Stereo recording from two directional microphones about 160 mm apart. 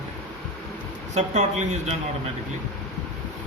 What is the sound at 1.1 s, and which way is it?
A man's voice, 45° right (ahead or behind).